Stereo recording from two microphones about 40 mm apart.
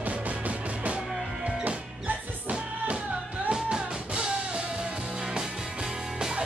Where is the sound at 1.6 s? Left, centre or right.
Right.